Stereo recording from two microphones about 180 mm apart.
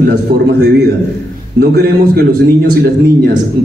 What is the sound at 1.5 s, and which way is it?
Speech, 60° right (ahead or behind).